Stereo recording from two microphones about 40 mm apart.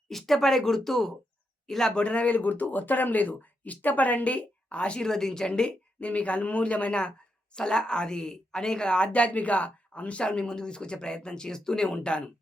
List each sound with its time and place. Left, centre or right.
0.1 s speech: centre
2.0 s speech: left
2.3 s speech: left
4.9 s speech: centre
9.1 s speech: left